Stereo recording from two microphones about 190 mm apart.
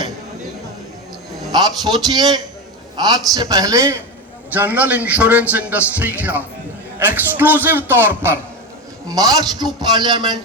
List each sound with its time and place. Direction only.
1.5 s a man's voice: 20° right (ahead or behind)